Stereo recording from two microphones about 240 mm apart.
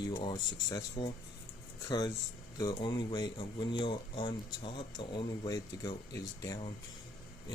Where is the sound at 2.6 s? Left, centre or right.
Centre.